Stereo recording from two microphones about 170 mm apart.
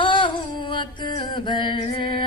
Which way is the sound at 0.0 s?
30° left (ahead or behind).